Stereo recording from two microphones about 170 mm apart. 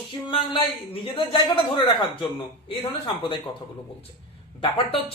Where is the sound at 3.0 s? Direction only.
30° left (ahead or behind).